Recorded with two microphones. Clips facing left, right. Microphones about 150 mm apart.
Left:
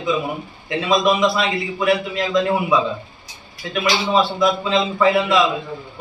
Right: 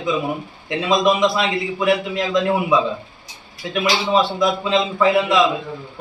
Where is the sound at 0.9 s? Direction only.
15° right (ahead or behind).